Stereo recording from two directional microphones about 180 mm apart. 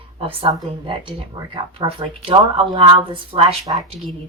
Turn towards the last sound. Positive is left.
turn(degrees=0)  # may be behind; listen again after turning